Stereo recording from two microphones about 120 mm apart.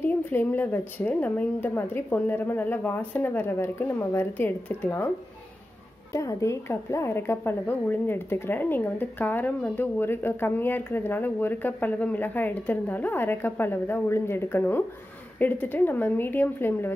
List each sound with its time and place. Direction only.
0.0 s a woman's voice: 15° left (ahead or behind)
6.1 s a woman's voice: 25° left (ahead or behind)